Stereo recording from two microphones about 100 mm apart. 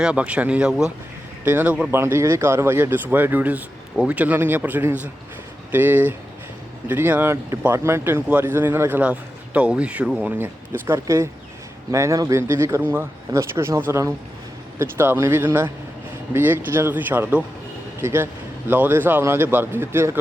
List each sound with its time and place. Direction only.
0.0 s a man's voice: 10° right (ahead or behind)
1.9 s a man's voice: 25° right (ahead or behind)